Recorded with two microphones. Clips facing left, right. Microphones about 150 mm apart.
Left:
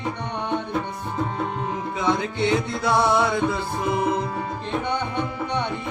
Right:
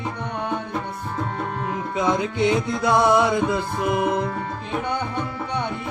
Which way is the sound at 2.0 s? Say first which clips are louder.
Right 2 dB; 20° right (ahead or behind).